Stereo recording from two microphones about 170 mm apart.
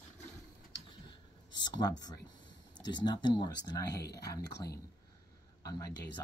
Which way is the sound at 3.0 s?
25° left (ahead or behind).